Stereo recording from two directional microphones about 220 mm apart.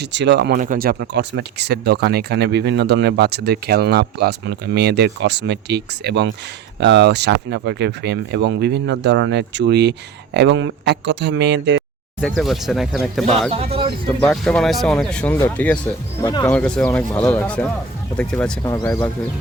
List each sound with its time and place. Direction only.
0.0 s speech: 50° right (ahead or behind)
12.4 s speech: centre (ahead or behind)
16.2 s speech: 20° left (ahead or behind)
16.5 s speech: 5° left (ahead or behind)